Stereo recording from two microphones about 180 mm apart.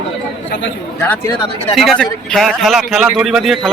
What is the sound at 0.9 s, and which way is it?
Speech, 10° left (ahead or behind).